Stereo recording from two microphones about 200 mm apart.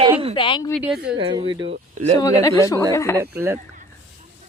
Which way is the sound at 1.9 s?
35° right (ahead or behind).